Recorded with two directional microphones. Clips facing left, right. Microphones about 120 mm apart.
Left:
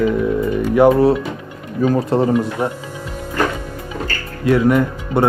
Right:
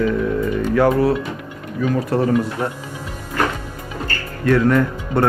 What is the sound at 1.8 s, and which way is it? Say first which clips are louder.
Speech: left 4 dB; 35° left (ahead or behind).